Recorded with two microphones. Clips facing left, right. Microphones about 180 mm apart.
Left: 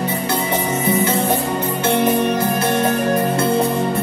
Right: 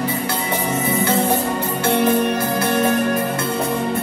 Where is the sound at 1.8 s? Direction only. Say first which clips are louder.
Even; 25° left (ahead or behind).